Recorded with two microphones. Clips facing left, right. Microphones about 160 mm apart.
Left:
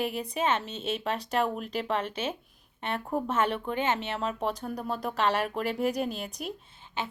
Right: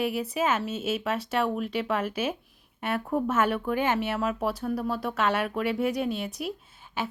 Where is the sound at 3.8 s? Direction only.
10° right (ahead or behind).